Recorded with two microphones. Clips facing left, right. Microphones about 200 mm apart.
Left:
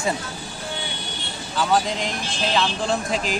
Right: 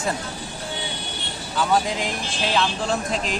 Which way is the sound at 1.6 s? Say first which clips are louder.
Even; 5° right (ahead or behind).